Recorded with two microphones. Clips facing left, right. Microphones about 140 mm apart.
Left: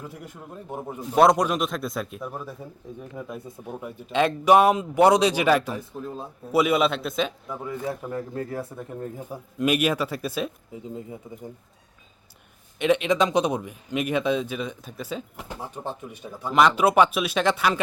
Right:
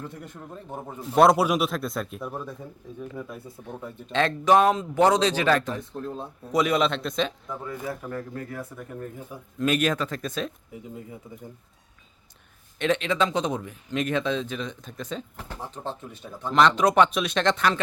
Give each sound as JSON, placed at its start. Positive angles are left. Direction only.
{"t": 0.0, "sound": "speech", "side_deg": 5}
{"t": 1.0, "sound": "speech", "side_deg": 0}
{"t": 3.0, "sound": "speech", "side_deg": 20}
{"t": 8.3, "sound": "speech", "side_deg": 30}
{"t": 9.6, "sound": "speech", "side_deg": 10}
{"t": 10.8, "sound": "speech", "side_deg": 25}
{"t": 12.8, "sound": "speech", "side_deg": 10}